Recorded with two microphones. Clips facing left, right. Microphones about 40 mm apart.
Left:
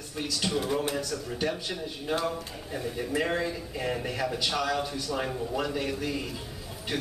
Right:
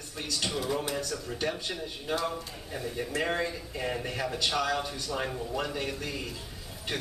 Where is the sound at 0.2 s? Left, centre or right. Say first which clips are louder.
Left 3 dB; centre.